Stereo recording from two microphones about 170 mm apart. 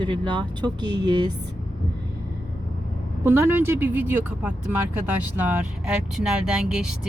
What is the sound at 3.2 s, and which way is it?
A woman's voice, 15° right (ahead or behind).